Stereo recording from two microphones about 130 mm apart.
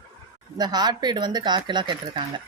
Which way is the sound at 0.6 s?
30° right (ahead or behind).